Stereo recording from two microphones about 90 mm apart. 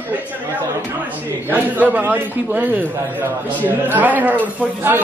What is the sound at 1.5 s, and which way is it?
Speech, 20° right (ahead or behind).